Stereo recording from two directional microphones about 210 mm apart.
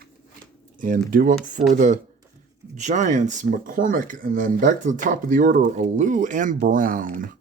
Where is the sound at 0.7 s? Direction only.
40° right (ahead or behind).